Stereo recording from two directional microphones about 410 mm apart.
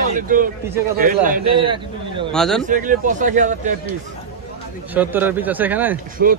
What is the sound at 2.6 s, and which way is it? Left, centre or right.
Speech, centre.